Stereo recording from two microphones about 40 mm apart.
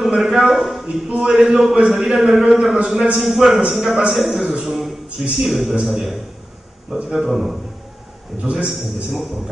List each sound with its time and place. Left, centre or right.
0.0 s a sound: centre
0.8 s a man's voice: centre
4.6 s a sound: centre
5.3 s a man's voice: centre
8.4 s a man's voice: right
8.6 s a man's voice: centre